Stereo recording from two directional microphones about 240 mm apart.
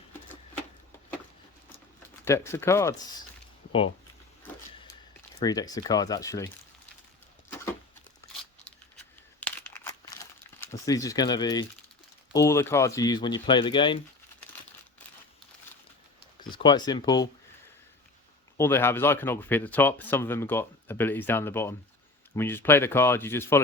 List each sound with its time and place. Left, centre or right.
2.2 s speech: centre
5.4 s speech: centre
9.4 s crumpling: centre
12.3 s speech: centre
16.6 s speech: centre
18.5 s speech: centre